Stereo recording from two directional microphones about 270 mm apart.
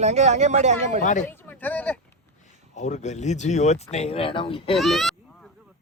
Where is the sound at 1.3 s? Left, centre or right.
Centre.